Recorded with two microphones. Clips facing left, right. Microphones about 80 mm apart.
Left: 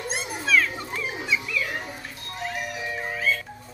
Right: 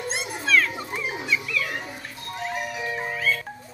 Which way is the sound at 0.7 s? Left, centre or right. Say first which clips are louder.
Right 1 dB; centre.